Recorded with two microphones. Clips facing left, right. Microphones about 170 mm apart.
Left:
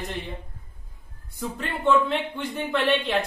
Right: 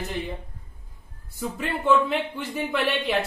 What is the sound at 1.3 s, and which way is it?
Speech, 5° right (ahead or behind).